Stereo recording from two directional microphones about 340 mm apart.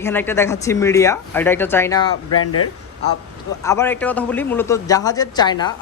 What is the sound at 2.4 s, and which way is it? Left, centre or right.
Speech, left.